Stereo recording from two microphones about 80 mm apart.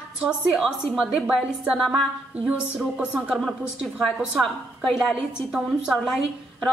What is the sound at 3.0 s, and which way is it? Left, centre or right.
Speech, centre.